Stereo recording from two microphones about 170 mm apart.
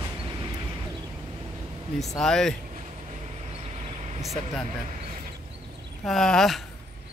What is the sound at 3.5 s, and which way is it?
Vehicle, 35° right (ahead or behind).